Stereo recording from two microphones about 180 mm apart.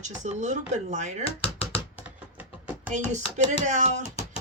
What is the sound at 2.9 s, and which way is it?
Speech, 45° right (ahead or behind).